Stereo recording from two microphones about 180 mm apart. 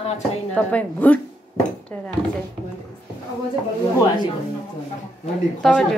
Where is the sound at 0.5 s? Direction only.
10° left (ahead or behind).